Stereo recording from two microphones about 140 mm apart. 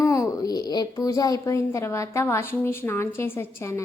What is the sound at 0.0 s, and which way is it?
A woman's voice, 20° left (ahead or behind).